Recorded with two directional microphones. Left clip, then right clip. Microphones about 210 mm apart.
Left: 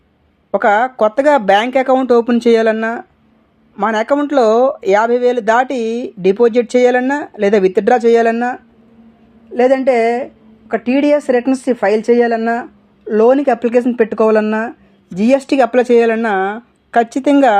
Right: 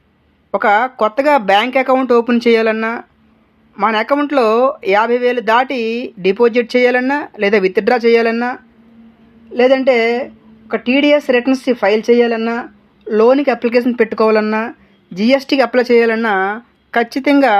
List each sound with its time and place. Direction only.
0.5 s speech: 25° left (ahead or behind)